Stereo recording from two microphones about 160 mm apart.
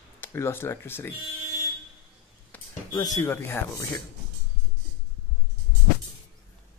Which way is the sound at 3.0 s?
20° left (ahead or behind).